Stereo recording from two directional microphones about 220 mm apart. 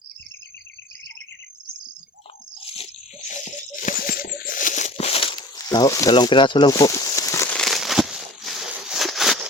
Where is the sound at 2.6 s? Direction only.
25° left (ahead or behind).